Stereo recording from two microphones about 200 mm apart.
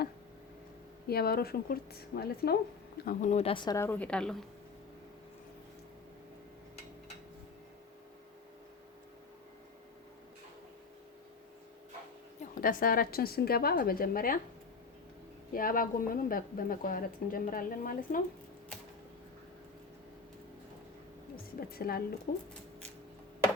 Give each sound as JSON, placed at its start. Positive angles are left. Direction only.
{"t": 1.0, "sound": "a woman's voice", "side_deg": 50}
{"t": 3.1, "sound": "a woman's voice", "side_deg": 40}
{"t": 12.4, "sound": "a woman's voice", "side_deg": 45}
{"t": 15.5, "sound": "a woman's voice", "side_deg": 45}
{"t": 21.7, "sound": "a woman's voice", "side_deg": 50}